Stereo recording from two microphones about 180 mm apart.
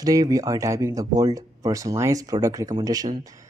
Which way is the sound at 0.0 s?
20° right (ahead or behind).